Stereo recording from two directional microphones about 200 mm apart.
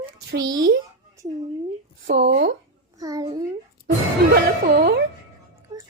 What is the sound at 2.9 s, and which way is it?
Speech, 15° right (ahead or behind).